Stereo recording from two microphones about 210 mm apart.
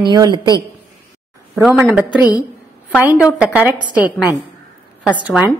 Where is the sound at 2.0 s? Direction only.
15° left (ahead or behind).